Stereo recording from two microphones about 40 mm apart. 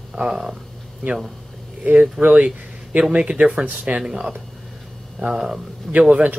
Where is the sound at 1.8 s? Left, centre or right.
Right.